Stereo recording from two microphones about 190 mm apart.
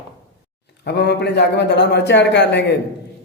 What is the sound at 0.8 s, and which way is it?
A man's voice, 60° left (ahead or behind).